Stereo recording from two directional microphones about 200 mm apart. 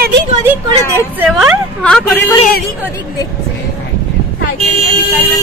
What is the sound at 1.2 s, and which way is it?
A woman's voice, centre (ahead or behind).